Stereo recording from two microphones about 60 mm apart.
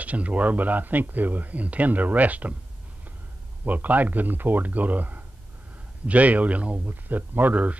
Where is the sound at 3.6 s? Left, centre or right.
Right.